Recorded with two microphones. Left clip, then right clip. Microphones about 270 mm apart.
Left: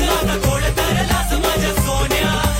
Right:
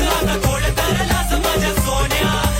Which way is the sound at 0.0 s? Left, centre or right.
Centre.